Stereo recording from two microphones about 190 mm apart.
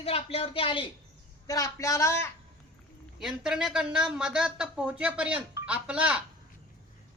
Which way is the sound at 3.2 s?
5° right (ahead or behind).